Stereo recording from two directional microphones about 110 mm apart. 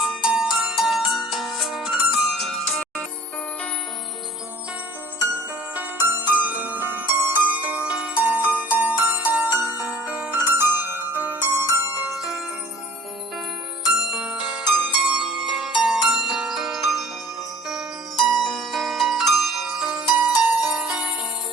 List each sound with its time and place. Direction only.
0.0 s ringtone: 5° right (ahead or behind)
0.5 s music: 5° right (ahead or behind)
5.7 s music: 20° right (ahead or behind)
13.9 s bell: 5° right (ahead or behind)
14.8 s music: 5° right (ahead or behind)